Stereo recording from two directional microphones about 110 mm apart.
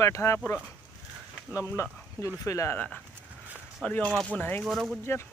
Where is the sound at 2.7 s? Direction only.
15° left (ahead or behind).